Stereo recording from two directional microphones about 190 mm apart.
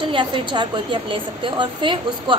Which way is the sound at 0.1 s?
25° right (ahead or behind).